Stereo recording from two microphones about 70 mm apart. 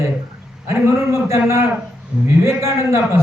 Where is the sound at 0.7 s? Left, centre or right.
Right.